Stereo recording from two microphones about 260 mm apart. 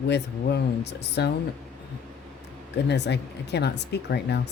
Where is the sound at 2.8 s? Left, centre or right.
Left.